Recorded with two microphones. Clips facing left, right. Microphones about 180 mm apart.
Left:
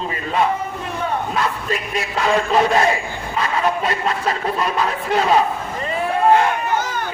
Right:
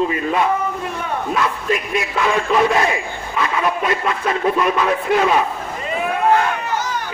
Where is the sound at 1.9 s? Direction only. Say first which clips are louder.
Left 3 dB; 35° left (ahead or behind).